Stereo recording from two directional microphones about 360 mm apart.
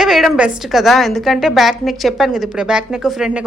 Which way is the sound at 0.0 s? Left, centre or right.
Centre.